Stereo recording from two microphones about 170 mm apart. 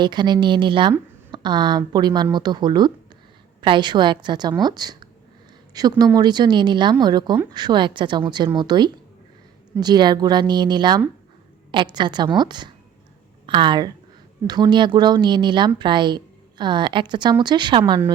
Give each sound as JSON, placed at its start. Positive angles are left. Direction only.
{"t": 0.0, "sound": "a woman's voice", "side_deg": -25}